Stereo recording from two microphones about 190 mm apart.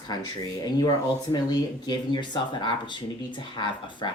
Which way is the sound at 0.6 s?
20° left (ahead or behind).